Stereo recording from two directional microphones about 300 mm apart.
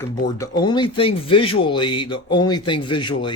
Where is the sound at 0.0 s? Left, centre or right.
Centre.